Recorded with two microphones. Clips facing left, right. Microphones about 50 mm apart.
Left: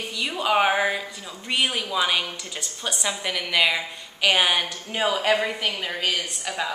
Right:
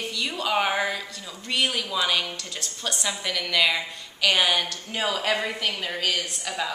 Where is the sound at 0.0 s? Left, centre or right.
Centre.